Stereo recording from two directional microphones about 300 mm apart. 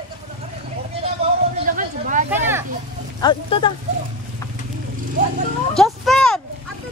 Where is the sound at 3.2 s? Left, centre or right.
Centre.